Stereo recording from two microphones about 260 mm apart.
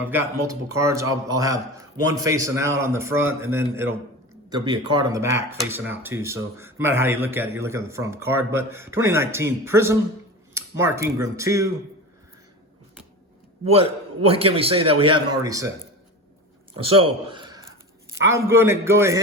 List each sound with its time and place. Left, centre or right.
0.0 s speech: centre
13.7 s a man's voice: right
16.7 s a man's voice: right